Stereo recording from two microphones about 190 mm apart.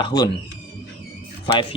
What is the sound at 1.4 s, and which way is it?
Speech, 25° left (ahead or behind).